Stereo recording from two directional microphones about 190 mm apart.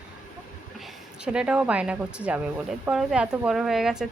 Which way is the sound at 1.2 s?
5° right (ahead or behind).